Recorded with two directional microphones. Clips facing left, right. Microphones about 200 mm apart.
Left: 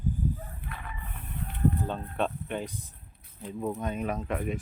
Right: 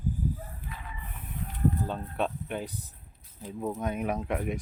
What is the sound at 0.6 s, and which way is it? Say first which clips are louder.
Chicken: left 1 dB; 60° left (ahead or behind).